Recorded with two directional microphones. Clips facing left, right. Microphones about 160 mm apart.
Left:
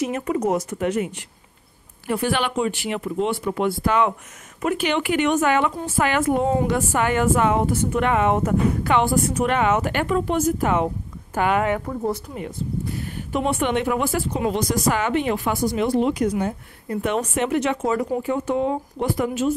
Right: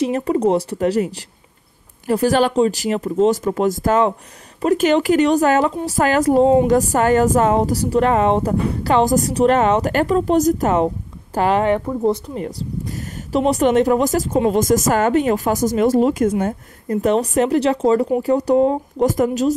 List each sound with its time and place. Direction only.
0.0 s speech: 30° right (ahead or behind)
6.7 s speech: 40° right (ahead or behind)